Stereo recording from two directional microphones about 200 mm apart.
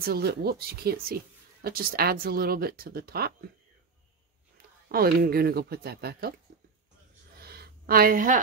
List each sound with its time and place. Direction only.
0.0 s speech: 50° right (ahead or behind)
4.6 s speech: 50° right (ahead or behind)
7.3 s a sound: 50° right (ahead or behind)